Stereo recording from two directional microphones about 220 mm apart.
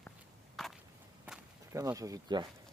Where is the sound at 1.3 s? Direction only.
15° right (ahead or behind).